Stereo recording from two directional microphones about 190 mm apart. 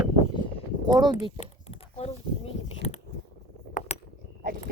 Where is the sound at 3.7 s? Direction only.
45° left (ahead or behind).